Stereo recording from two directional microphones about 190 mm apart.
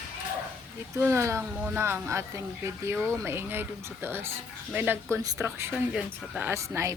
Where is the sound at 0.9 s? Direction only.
15° right (ahead or behind).